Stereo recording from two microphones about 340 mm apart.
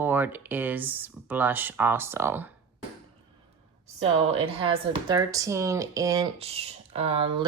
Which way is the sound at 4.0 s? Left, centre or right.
Centre.